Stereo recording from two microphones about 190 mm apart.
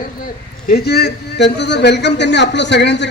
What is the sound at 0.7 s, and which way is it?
A man's voice, 60° left (ahead or behind).